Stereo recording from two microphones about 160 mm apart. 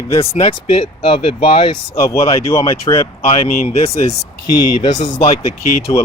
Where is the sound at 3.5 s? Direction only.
65° left (ahead or behind).